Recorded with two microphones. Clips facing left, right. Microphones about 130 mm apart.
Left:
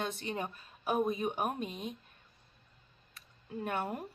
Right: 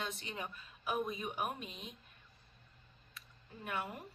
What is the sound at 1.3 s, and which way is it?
Speech, 35° left (ahead or behind).